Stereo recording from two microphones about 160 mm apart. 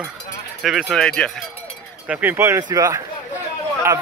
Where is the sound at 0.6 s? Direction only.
5° right (ahead or behind).